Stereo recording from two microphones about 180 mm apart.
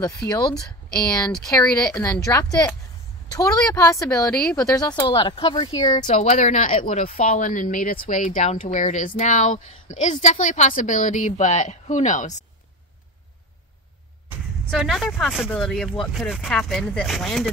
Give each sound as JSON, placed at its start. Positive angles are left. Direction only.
{"t": 0.3, "sound": "speech", "side_deg": 25}
{"t": 6.0, "sound": "speech", "side_deg": 40}
{"t": 14.7, "sound": "speech", "side_deg": 0}